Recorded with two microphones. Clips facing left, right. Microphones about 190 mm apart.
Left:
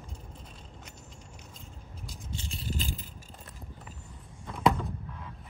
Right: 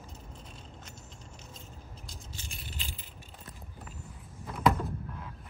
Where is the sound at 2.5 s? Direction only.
40° left (ahead or behind).